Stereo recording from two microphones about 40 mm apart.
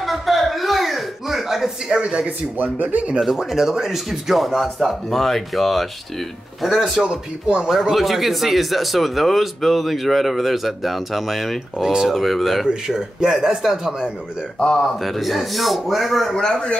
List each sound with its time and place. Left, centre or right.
0.0 s a sound: centre
2.0 s speech: right
2.5 s speech: right
3.2 s speech: centre
12.6 s speech: centre
16.3 s a man's voice: centre